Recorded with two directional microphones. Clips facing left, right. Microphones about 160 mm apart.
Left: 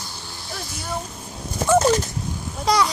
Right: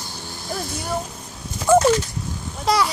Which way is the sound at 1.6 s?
40° left (ahead or behind).